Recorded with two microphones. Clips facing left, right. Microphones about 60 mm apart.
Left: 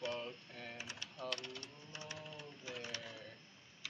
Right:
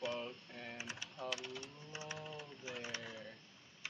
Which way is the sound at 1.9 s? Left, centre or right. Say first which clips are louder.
Right 3 dB; right.